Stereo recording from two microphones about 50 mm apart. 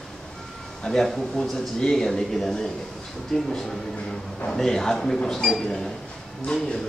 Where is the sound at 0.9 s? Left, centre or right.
Centre.